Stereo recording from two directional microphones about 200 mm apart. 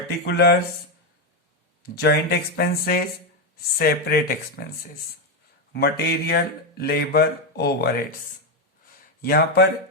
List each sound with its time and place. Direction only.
0.3 s speech: 55° left (ahead or behind)
2.0 s speech: 50° left (ahead or behind)
5.7 s speech: 55° left (ahead or behind)
9.2 s speech: 50° left (ahead or behind)